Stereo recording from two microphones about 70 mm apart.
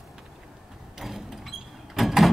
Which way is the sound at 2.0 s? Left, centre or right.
Centre.